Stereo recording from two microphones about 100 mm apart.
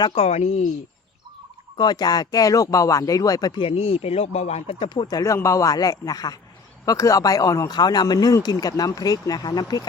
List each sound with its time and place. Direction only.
0.1 s speech: 85° left
1.7 s speech: 45° left (ahead or behind)
3.6 s speech: 75° left (ahead or behind)
4.9 s speech: 40° left (ahead or behind)